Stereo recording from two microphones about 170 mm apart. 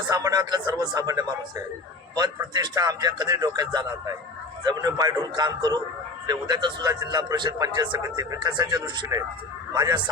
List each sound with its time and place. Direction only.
0.1 s a man's voice: 20° right (ahead or behind)